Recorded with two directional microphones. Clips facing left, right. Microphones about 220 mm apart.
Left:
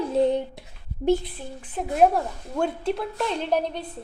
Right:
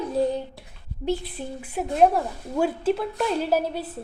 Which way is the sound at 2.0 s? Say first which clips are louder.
Even; 5° right (ahead or behind).